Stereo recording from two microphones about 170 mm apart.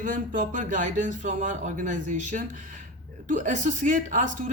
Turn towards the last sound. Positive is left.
turn(degrees=-50)  # may be behind; listen again after turning